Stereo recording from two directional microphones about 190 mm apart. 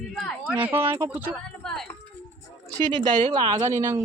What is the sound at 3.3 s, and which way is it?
Speech, 20° right (ahead or behind).